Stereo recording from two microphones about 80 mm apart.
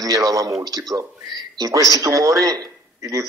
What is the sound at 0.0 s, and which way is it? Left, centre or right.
A man's voice, right.